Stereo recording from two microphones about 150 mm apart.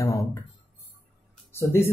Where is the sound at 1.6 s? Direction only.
15° left (ahead or behind).